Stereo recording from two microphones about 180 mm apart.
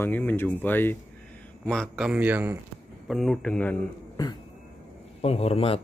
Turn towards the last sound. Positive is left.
turn(degrees=35)  # may be behind; listen again after turning